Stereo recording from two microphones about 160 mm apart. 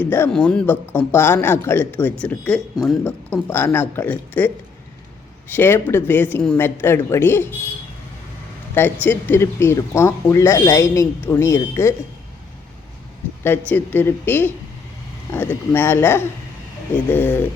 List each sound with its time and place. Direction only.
0.0 s speech: 10° left (ahead or behind)
8.7 s speech: 10° left (ahead or behind)
13.4 s speech: 15° left (ahead or behind)